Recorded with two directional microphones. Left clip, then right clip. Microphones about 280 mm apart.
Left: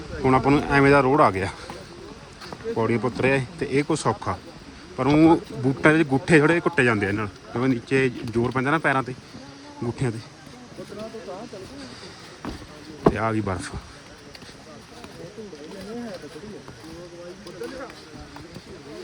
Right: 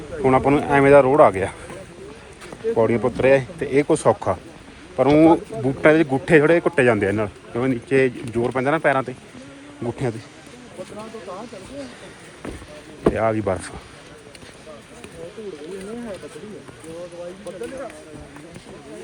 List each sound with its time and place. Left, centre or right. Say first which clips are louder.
0.2 s a man's voice: right 3 dB; centre
2.7 s a man's voice: right 5 dB; centre
13.1 s a man's voice: right 3 dB; centre